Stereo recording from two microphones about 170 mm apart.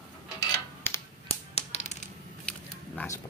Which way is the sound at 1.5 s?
40° left (ahead or behind).